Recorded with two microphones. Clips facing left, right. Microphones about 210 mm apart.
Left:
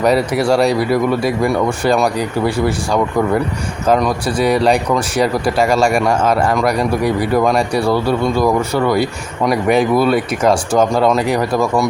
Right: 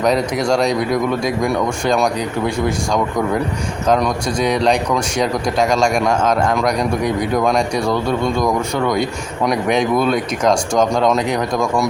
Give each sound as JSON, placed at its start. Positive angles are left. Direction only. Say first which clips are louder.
{"t": 0.0, "sound": "speech", "louder": "left 3 dB", "side_deg": 5}